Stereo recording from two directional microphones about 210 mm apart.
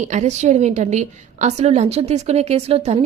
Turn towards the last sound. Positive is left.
turn(degrees=-30)  # may be behind; listen again after turning